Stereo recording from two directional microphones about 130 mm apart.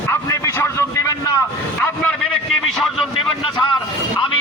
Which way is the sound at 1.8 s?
15° left (ahead or behind).